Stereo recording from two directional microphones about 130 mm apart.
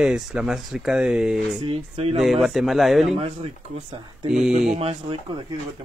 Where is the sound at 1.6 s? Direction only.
45° right (ahead or behind).